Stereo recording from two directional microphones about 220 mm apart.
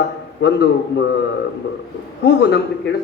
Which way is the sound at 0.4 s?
50° left (ahead or behind).